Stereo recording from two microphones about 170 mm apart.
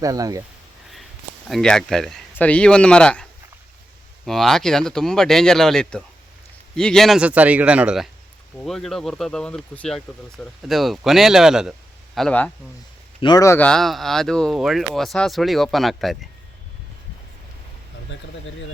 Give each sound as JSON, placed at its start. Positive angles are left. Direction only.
{"t": 0.0, "sound": "speech", "side_deg": -20}
{"t": 1.5, "sound": "speech", "side_deg": 0}
{"t": 4.3, "sound": "speech", "side_deg": 0}
{"t": 13.2, "sound": "speech", "side_deg": 20}
{"t": 13.7, "sound": "speech", "side_deg": 0}
{"t": 18.1, "sound": "speech", "side_deg": 90}